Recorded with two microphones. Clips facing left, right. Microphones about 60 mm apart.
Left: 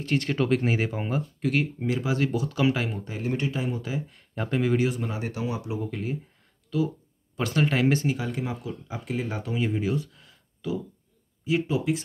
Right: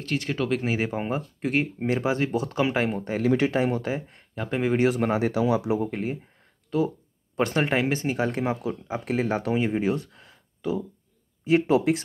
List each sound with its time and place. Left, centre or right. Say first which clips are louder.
0.2 s speech: left 2 dB; centre
0.8 s speech: right 1 dB; right
2.3 s speech: right 1 dB; right
3.2 s speech: right 7 dB; right
3.8 s speech: right 3 dB; right
4.5 s speech: even; right
4.8 s speech: right 6 dB; right
5.9 s speech: right 2 dB; right
8.2 s speech: right 6 dB; right
9.6 s speech: left 1 dB; right
10.1 s a sound: right 4 dB; right
11.4 s speech: right 5 dB; right